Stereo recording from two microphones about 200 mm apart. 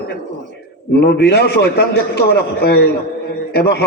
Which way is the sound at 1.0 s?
55° left (ahead or behind).